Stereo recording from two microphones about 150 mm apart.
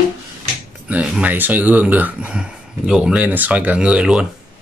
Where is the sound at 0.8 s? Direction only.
5° right (ahead or behind).